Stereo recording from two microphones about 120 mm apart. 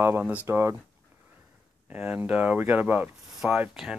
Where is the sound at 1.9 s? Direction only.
15° right (ahead or behind).